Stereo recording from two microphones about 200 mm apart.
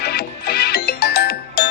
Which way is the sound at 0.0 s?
50° left (ahead or behind).